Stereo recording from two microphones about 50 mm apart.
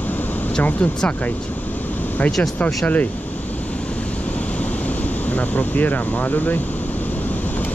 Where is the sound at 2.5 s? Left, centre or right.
Left.